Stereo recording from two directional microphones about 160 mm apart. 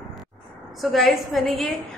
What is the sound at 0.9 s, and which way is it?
Speech, centre (ahead or behind).